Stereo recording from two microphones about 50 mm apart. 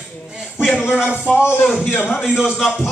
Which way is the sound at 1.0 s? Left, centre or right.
Centre.